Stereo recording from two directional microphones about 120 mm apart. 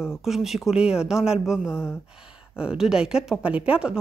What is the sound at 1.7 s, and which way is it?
Speech, 20° left (ahead or behind).